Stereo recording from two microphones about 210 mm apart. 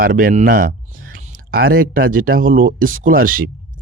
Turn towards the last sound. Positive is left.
turn(degrees=-40)  # may be behind; listen again after turning